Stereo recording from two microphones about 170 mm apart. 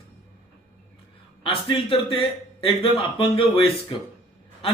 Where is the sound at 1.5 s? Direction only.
30° left (ahead or behind).